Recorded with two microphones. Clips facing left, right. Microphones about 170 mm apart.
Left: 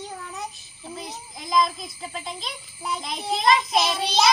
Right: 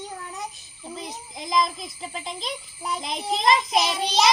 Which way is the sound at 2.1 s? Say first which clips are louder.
Right 3 dB; 20° right (ahead or behind).